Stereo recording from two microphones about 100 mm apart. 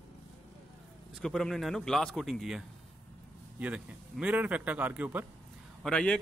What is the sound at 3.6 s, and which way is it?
Speech, 15° right (ahead or behind).